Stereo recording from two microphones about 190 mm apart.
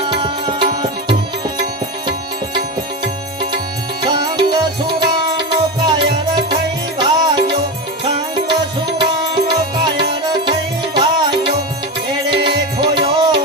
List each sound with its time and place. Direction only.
0.0 s music: 25° right (ahead or behind)
4.0 s music: 25° right (ahead or behind)
7.0 s music: 25° right (ahead or behind)
9.0 s music: 25° right (ahead or behind)
10.9 s music: 25° right (ahead or behind)